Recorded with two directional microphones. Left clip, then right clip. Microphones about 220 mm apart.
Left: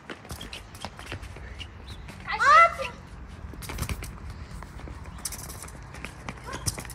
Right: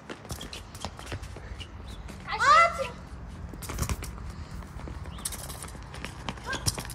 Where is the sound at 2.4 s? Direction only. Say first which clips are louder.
Left 3 dB; 30° left (ahead or behind).